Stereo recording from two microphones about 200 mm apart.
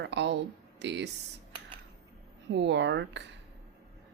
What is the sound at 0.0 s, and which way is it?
Speech, 60° right (ahead or behind).